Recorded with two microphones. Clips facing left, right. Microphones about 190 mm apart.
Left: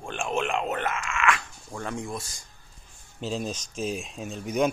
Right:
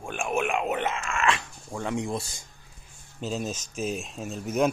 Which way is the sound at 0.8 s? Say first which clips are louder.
Even; 25° right (ahead or behind).